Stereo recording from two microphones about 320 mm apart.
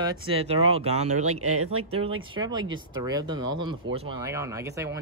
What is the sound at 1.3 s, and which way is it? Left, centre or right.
Speech, right.